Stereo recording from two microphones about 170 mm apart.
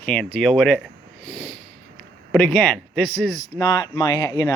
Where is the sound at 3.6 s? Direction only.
25° left (ahead or behind).